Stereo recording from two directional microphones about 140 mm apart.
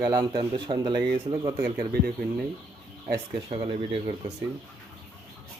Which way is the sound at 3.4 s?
40° right (ahead or behind).